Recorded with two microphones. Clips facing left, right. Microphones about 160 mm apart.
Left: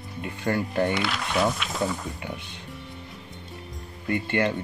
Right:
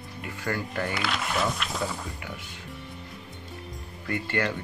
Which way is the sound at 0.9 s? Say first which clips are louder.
Left 3 dB; centre (ahead or behind).